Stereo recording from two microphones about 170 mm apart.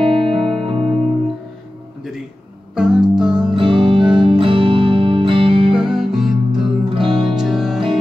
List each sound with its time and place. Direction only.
0.0 s music: 30° right (ahead or behind)
2.7 s music: 5° right (ahead or behind)
3.5 s music: 30° right (ahead or behind)
5.8 s music: 5° right (ahead or behind)
7.1 s music: 25° right (ahead or behind)
7.3 s music: 5° right (ahead or behind)